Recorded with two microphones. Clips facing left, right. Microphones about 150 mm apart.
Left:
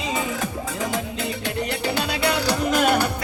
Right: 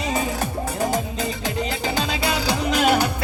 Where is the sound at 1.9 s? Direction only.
65° left (ahead or behind).